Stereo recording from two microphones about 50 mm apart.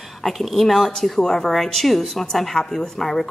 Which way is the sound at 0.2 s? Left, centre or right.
Centre.